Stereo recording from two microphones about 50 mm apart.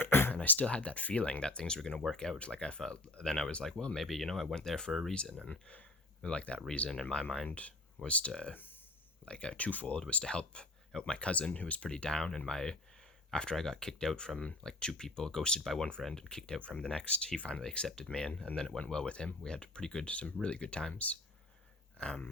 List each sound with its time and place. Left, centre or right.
0.0 s a sound: left
0.6 s speech: left
3.9 s speech: centre
4.9 s speech: centre
5.5 s speech: left
7.4 s speech: left
11.9 s speech: centre
16.6 s speech: left
17.6 s speech: centre